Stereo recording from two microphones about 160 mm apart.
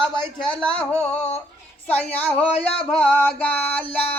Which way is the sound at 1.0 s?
45° left (ahead or behind).